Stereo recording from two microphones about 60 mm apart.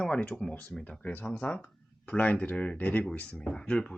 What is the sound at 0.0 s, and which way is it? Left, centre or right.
Speech, centre.